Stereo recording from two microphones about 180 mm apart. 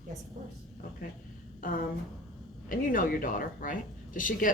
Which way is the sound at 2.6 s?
50° left (ahead or behind).